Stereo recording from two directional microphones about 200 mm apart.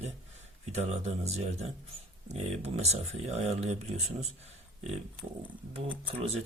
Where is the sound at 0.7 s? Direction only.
35° right (ahead or behind).